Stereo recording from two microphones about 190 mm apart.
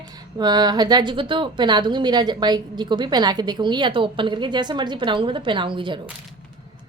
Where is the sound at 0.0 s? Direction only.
20° right (ahead or behind).